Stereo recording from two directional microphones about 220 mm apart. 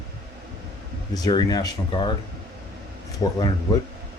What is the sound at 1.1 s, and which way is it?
Speech, 20° left (ahead or behind).